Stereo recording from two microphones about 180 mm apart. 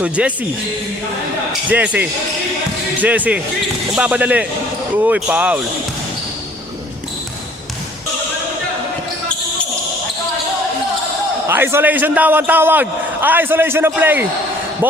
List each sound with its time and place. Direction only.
0.0 s a man's voice: 5° right (ahead or behind)
1.7 s a man's voice: 10° right (ahead or behind)
11.4 s a man's voice: 15° right (ahead or behind)